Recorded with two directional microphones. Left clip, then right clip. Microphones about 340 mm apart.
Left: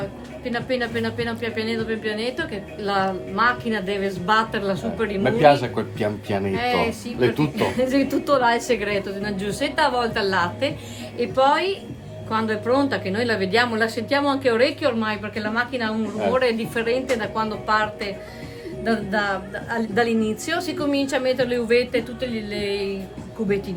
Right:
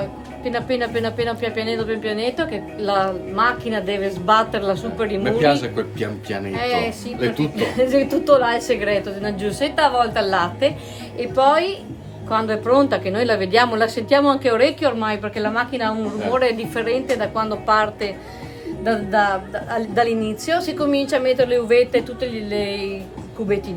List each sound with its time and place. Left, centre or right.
0.4 s a woman's voice: centre
5.2 s a man's voice: centre
6.5 s a woman's voice: centre